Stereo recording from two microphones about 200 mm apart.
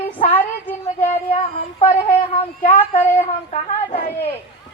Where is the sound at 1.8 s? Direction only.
30° left (ahead or behind).